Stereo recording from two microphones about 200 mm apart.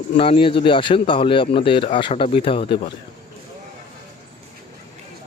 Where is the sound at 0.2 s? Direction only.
25° left (ahead or behind).